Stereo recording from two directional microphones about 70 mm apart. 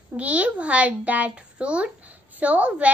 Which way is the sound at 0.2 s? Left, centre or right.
Centre.